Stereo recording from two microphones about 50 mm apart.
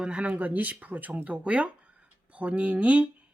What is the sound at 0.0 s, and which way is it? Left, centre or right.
Speech, centre.